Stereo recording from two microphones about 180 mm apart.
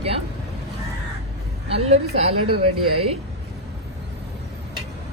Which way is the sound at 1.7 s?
35° right (ahead or behind).